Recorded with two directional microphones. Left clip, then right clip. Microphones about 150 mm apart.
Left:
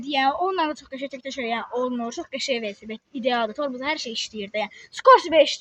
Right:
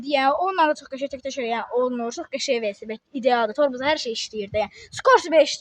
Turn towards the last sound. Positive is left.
turn(degrees=-40)  # may be behind; listen again after turning